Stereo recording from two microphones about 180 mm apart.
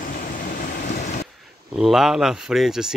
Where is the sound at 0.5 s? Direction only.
55° left (ahead or behind).